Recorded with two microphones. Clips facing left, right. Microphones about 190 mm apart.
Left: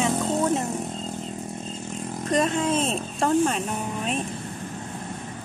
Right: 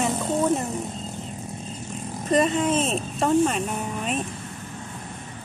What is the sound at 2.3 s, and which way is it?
Speech, 5° right (ahead or behind).